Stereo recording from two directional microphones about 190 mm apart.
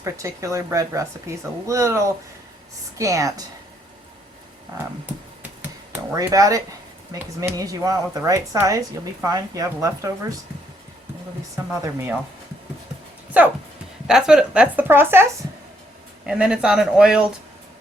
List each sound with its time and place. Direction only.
0.0 s speech: 15° right (ahead or behind)
6.1 s speech: 20° right (ahead or behind)
11.5 s speech: 15° right (ahead or behind)
13.4 s speech: 10° right (ahead or behind)